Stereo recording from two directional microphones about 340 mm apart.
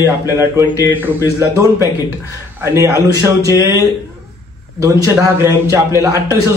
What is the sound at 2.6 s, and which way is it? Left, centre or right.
Speech, centre.